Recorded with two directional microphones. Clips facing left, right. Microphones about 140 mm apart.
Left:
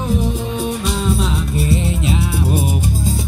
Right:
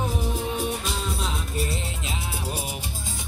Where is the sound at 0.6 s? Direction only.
90° left; by 2.9 s 50° left (ahead or behind).